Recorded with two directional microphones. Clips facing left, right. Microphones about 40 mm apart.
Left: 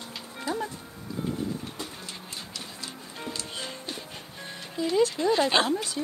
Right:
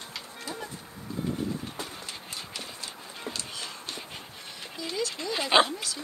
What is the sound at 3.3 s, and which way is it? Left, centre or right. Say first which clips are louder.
Music: left 2 dB; left.